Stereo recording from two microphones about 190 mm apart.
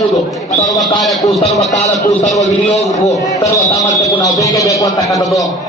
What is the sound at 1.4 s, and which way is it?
Speech, 35° left (ahead or behind).